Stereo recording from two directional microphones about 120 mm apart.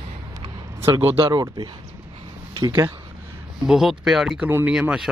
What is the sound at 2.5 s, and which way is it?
Speech, 35° right (ahead or behind).